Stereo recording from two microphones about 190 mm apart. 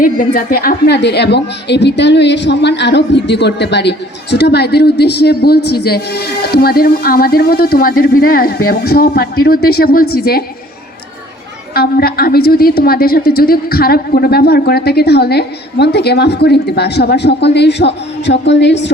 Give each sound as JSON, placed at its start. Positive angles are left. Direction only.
{"t": 0.3, "sound": "a woman's voice", "side_deg": 50}
{"t": 11.7, "sound": "a woman's voice", "side_deg": 55}